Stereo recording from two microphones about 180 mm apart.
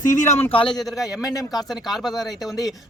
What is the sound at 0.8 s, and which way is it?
Speech, centre (ahead or behind).